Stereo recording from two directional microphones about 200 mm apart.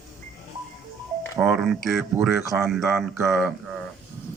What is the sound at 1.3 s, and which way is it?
Speech, centre (ahead or behind).